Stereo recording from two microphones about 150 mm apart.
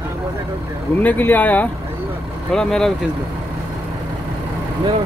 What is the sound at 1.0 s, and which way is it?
Speech, 10° left (ahead or behind).